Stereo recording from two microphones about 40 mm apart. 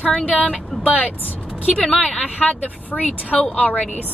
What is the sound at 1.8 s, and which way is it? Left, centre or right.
Speech, left.